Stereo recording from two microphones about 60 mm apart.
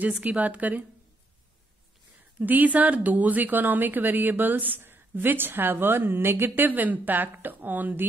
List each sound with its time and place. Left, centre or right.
0.2 s a woman's voice: right
2.3 s a woman's voice: right